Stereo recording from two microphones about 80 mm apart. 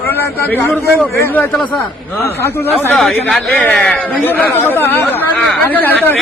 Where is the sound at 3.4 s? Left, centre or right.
Centre.